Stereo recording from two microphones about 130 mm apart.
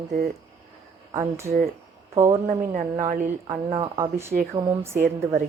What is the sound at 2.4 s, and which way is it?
Speech, 85° right.